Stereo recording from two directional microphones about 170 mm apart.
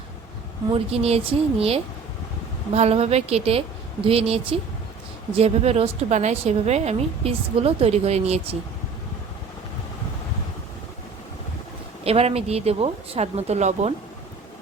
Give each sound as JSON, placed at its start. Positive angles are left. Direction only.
{"t": 0.7, "sound": "a woman's voice", "side_deg": -35}
{"t": 12.0, "sound": "a woman's voice", "side_deg": -35}